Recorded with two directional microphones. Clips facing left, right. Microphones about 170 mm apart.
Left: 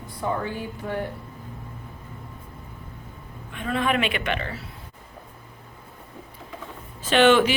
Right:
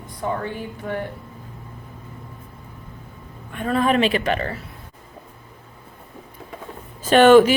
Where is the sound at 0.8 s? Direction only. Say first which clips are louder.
Right 2 dB; 50° right (ahead or behind).